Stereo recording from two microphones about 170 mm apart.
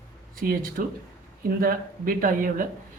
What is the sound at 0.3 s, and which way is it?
Speech, 55° right (ahead or behind).